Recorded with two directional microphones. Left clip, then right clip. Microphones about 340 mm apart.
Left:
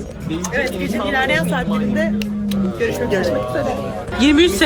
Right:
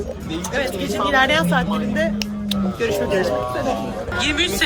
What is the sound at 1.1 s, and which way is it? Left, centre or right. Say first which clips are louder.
Speech: right 2 dB; centre.